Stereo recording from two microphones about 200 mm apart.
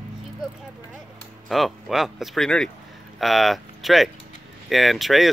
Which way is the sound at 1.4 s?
Centre (ahead or behind).